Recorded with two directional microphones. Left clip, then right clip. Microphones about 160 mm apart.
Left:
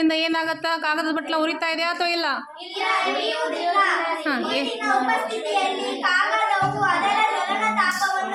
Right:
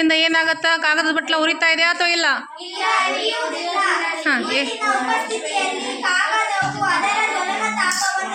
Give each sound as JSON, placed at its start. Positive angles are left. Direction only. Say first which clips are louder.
{"t": 0.0, "sound": "speech", "louder": "right 5 dB", "side_deg": 5}